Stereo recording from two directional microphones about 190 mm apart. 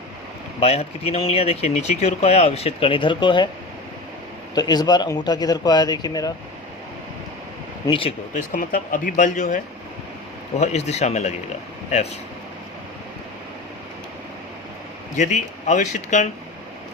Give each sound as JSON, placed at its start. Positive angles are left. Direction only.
{"t": 0.6, "sound": "speech", "side_deg": 35}
{"t": 4.5, "sound": "speech", "side_deg": 20}
{"t": 7.9, "sound": "speech", "side_deg": 30}
{"t": 8.3, "sound": "speech", "side_deg": 45}
{"t": 10.6, "sound": "speech", "side_deg": 35}
{"t": 15.1, "sound": "speech", "side_deg": 40}